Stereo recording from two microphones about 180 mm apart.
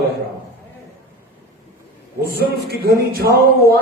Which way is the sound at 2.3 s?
60° right (ahead or behind).